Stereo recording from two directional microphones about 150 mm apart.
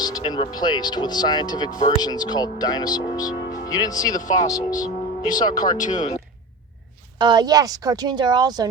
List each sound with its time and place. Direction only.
0.0 s speech: 25° left (ahead or behind)
4.2 s speech: 55° left (ahead or behind)
4.4 s speech: 25° left (ahead or behind)
5.3 s speech: 60° left (ahead or behind)
7.2 s speech: 30° right (ahead or behind)